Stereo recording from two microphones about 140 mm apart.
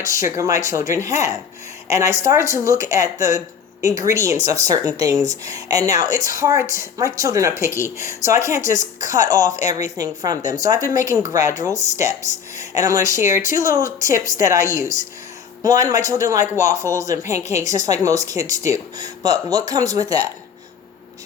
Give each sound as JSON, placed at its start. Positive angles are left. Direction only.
{"t": 0.0, "sound": "a woman's voice", "side_deg": -20}
{"t": 7.7, "sound": "speech", "side_deg": 20}
{"t": 7.9, "sound": "a woman's voice", "side_deg": -20}
{"t": 12.5, "sound": "a woman's voice", "side_deg": -25}